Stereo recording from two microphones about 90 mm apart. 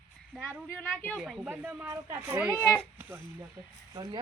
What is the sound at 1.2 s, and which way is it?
Speech, 5° right (ahead or behind).